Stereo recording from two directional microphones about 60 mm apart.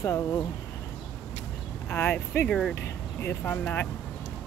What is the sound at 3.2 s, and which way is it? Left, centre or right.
Speech, left.